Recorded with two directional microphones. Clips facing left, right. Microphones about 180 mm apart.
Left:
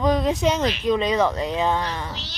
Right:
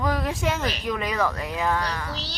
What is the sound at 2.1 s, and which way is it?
Speech, 35° right (ahead or behind).